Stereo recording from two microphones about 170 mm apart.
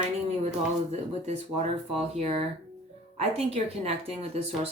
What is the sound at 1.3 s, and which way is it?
Speech, 40° right (ahead or behind).